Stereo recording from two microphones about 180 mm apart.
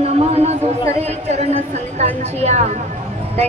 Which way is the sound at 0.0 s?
35° right (ahead or behind).